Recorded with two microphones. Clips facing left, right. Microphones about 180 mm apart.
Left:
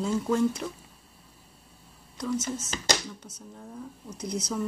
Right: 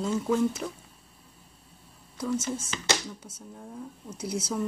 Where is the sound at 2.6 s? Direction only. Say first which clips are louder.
Left 1 dB; 40° left (ahead or behind).